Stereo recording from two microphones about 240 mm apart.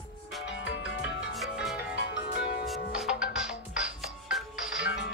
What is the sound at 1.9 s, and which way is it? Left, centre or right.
Music, left.